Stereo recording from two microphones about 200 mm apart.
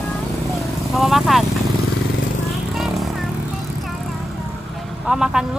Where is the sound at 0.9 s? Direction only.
Centre (ahead or behind).